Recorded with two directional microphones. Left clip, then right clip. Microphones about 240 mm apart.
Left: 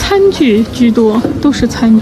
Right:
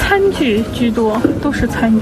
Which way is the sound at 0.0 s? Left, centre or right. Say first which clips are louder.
Left 4 dB; centre.